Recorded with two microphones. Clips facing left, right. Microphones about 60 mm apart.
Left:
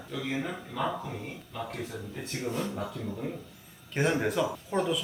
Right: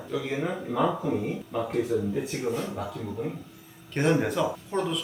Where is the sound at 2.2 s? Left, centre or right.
Centre.